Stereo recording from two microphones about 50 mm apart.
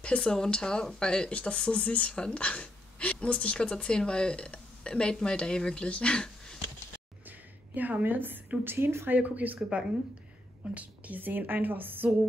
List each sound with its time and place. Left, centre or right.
0.0 s speech: centre
7.2 s a sound: right
8.6 s speech: right
9.2 s a woman's voice: right
9.6 s a woman's voice: centre
11.1 s a woman's voice: right